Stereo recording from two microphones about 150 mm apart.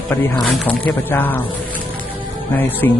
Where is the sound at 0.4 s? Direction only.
5° left (ahead or behind).